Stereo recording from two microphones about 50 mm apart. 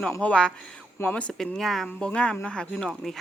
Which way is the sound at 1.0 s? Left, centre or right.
Left.